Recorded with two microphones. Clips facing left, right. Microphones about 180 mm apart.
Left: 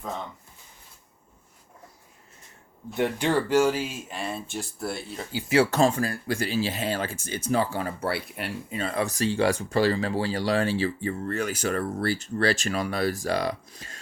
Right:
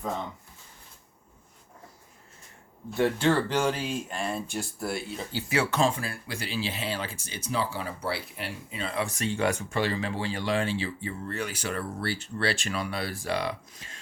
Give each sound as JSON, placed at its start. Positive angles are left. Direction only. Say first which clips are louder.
{"t": 2.9, "sound": "speech", "louder": "even", "side_deg": 15}
{"t": 5.7, "sound": "speech", "louder": "left 4 dB", "side_deg": 45}